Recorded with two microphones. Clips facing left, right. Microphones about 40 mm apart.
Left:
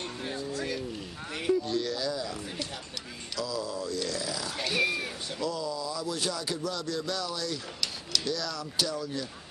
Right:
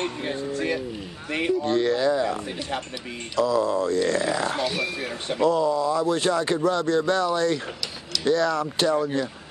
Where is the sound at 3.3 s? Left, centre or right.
Right.